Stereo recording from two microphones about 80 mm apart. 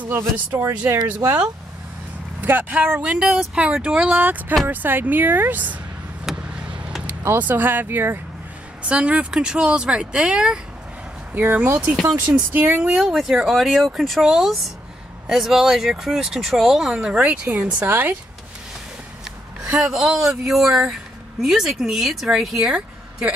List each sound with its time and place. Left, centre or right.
0.6 s speech: right
2.4 s speech: right
4.2 s speech: right
6.2 s vehicle: centre
7.2 s speech: right
8.8 s speech: centre
11.3 s speech: right
11.9 s speech: centre
12.5 s speech: right
12.8 s speech: centre; by 18.1 s right
19.2 s speech: centre